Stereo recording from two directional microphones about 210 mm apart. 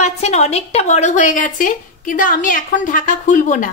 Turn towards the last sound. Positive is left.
turn(degrees=40)  # may be behind; listen again after turning